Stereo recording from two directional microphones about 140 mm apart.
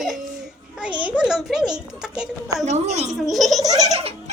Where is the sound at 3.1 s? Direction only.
Centre (ahead or behind).